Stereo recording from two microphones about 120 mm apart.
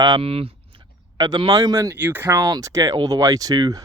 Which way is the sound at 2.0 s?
15° right (ahead or behind).